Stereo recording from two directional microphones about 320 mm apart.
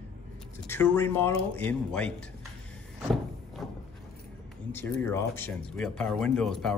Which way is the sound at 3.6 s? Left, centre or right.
Centre.